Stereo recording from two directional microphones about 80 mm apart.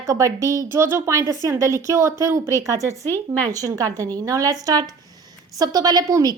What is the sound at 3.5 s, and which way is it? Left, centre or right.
Speech, right.